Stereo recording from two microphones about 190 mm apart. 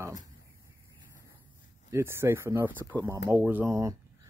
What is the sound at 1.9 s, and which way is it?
Speech, 15° right (ahead or behind).